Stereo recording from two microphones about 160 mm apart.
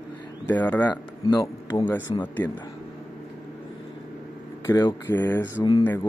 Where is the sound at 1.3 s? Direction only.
20° left (ahead or behind).